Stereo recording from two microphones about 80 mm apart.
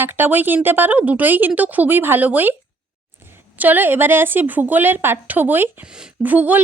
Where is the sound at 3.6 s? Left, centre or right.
Right.